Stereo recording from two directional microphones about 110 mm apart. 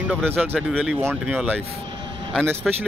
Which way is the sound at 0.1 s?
15° right (ahead or behind).